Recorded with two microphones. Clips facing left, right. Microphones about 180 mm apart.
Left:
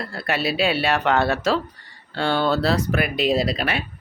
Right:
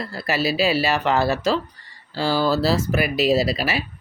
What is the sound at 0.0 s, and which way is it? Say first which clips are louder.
Speech: right 1 dB; centre (ahead or behind).